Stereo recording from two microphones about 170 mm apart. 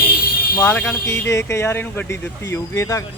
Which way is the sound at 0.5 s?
10° left (ahead or behind).